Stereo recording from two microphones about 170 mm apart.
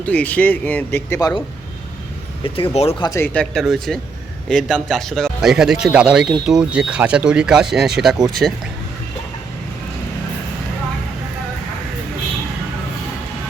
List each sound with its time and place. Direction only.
0.0 s speech: 10° left (ahead or behind)
2.4 s speech: 35° left (ahead or behind)
3.3 s speech: centre (ahead or behind)